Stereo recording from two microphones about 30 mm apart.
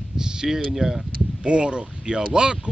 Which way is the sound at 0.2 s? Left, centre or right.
Right.